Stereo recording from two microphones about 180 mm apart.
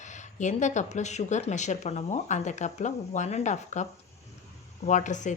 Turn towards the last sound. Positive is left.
turn(degrees=45)  # may be behind; listen again after turning